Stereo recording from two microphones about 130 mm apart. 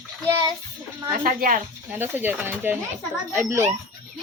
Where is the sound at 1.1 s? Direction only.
90° right.